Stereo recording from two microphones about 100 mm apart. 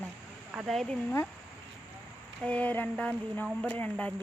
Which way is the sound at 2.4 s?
15° left (ahead or behind).